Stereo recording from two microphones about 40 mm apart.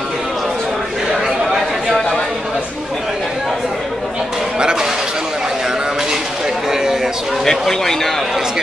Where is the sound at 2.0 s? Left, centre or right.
Centre.